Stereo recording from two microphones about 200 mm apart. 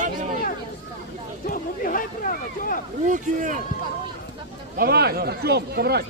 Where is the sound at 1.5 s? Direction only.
45° left (ahead or behind).